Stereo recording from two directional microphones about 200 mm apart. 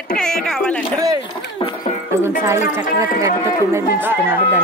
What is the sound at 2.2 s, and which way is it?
Music, 15° right (ahead or behind).